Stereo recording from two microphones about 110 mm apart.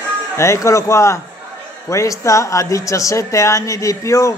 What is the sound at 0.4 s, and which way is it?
Speech, 25° left (ahead or behind).